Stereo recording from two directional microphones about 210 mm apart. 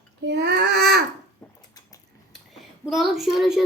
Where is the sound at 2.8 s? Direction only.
Centre (ahead or behind).